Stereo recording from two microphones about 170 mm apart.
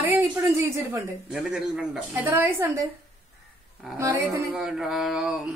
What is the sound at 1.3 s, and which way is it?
A woman's voice, 5° right (ahead or behind).